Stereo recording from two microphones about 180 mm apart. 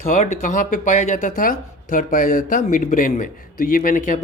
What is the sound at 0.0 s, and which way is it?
Speech, 40° left (ahead or behind).